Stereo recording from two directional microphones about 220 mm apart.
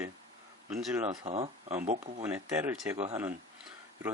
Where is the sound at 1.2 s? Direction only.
25° right (ahead or behind).